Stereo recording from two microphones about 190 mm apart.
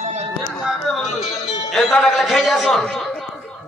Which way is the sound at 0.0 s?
35° right (ahead or behind).